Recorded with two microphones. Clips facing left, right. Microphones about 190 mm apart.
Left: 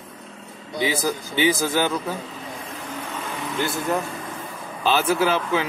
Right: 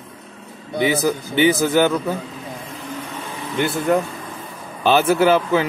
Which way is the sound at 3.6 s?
65° right (ahead or behind).